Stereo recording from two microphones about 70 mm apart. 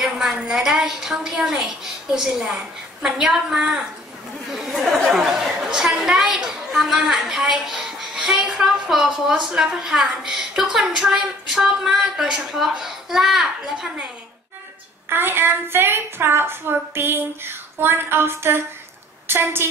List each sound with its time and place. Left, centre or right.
0.0 s a woman's voice: centre
15.0 s a woman's voice: right